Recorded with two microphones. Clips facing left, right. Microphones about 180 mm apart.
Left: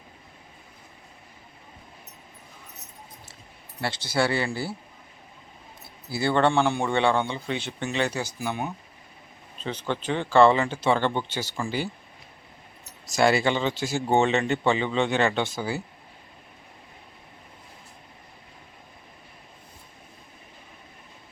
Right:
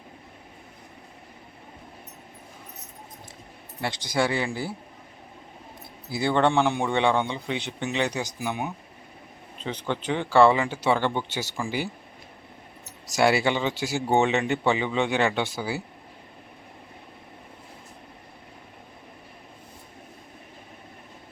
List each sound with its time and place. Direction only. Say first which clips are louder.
3.8 s a man's voice: even; 15° right (ahead or behind)
6.1 s a man's voice: even; 15° right (ahead or behind)
13.1 s a man's voice: even; 10° right (ahead or behind)